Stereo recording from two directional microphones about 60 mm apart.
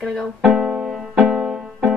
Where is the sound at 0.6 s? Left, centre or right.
Centre.